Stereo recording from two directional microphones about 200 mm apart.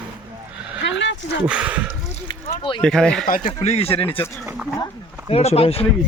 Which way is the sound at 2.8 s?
5° left (ahead or behind).